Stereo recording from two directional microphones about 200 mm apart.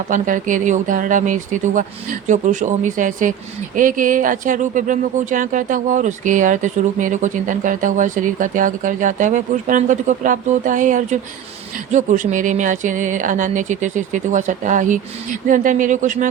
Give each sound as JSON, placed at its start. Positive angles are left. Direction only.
{"t": 0.1, "sound": "speech", "side_deg": -40}